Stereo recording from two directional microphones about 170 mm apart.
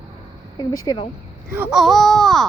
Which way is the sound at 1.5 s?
10° right (ahead or behind).